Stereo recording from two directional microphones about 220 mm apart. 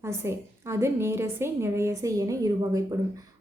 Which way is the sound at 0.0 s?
10° right (ahead or behind).